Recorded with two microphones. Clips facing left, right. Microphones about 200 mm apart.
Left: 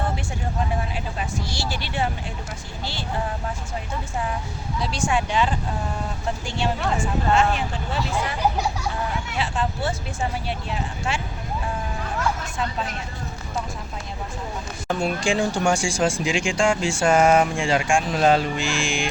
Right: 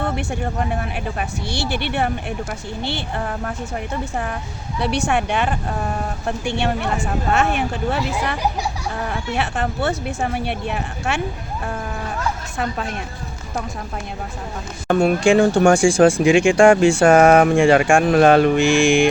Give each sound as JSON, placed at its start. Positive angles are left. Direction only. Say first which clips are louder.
{"t": 0.8, "sound": "speech", "louder": "right 4 dB", "side_deg": -60}
{"t": 9.4, "sound": "speech", "louder": "right 3 dB", "side_deg": -65}
{"t": 14.8, "sound": "speech", "louder": "right 8 dB", "side_deg": -60}